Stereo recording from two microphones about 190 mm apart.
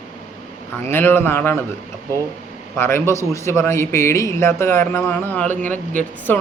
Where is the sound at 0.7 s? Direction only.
10° left (ahead or behind).